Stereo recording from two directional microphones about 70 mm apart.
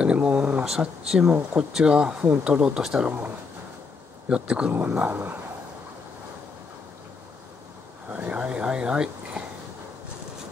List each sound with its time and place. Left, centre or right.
0.0 s a sound: centre
0.7 s speech: centre
4.3 s speech: centre
4.7 s speech: right
8.1 s speech: centre